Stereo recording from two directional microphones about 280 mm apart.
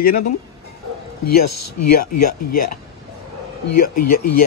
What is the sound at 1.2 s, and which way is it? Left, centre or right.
Speech, left.